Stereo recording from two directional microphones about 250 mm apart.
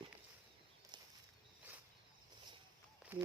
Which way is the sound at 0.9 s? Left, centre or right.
Centre.